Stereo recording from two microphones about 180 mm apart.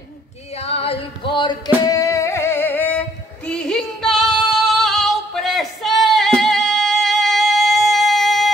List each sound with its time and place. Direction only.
0.6 s music: 35° left (ahead or behind); by 8.5 s centre (ahead or behind)